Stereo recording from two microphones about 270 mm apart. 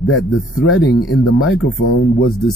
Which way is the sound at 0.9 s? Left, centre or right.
Left.